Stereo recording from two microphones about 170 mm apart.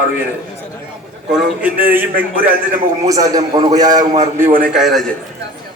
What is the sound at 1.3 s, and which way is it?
A man's voice, 5° right (ahead or behind).